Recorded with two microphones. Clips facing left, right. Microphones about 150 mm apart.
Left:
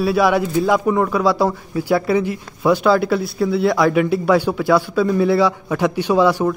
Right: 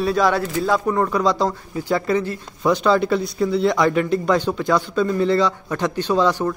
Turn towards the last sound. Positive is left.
turn(degrees=10)  # may be behind; listen again after turning